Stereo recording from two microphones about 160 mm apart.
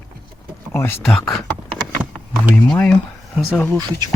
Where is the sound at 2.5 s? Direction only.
5° left (ahead or behind).